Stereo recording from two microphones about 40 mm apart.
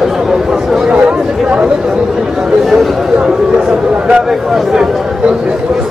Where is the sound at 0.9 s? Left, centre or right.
Right.